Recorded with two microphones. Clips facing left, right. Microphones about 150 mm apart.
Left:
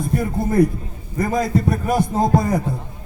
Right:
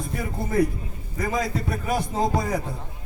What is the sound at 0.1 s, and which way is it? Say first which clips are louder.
A man's voice: left 6 dB; 50° left (ahead or behind).